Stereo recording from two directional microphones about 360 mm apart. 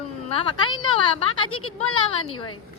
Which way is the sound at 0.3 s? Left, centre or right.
Centre.